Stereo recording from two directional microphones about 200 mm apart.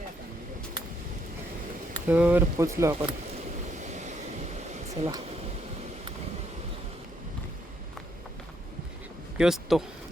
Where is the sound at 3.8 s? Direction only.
35° right (ahead or behind).